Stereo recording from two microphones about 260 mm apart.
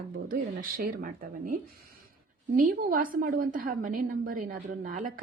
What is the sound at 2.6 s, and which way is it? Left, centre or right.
A woman's voice, right.